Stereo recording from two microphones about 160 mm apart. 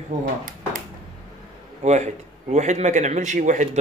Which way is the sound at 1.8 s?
45° right (ahead or behind).